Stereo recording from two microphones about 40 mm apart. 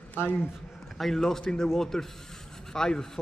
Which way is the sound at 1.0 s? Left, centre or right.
Centre.